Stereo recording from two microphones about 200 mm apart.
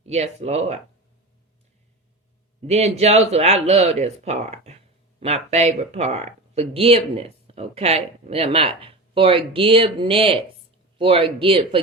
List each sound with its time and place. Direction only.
0.0 s speech: 30° right (ahead or behind)
2.6 s speech: 30° right (ahead or behind)